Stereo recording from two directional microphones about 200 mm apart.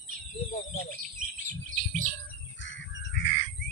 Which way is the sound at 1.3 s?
40° right (ahead or behind).